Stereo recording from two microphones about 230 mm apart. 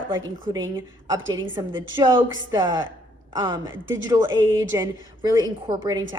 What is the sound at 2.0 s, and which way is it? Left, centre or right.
Speech, centre.